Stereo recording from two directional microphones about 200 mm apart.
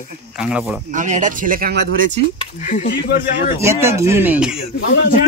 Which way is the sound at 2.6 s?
40° left (ahead or behind).